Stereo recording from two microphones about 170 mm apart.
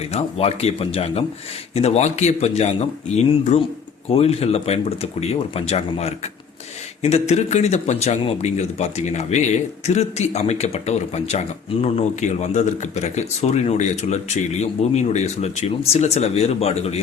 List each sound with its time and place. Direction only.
0.1 s a man's voice: 40° left (ahead or behind)